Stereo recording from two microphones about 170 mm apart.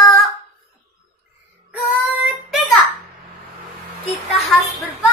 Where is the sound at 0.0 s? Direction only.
Centre (ahead or behind).